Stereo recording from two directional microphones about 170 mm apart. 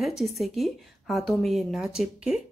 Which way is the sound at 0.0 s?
Centre (ahead or behind).